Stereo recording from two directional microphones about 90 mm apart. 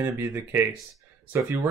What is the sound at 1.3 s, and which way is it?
Speech, 20° right (ahead or behind).